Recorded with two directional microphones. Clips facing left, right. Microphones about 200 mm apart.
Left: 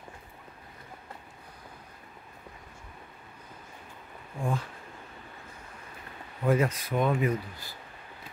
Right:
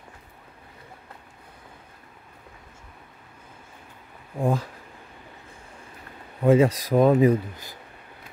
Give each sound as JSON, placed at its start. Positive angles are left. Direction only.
{"t": 4.4, "sound": "speech", "side_deg": -40}
{"t": 6.4, "sound": "speech", "side_deg": -25}
{"t": 7.5, "sound": "speech", "side_deg": -20}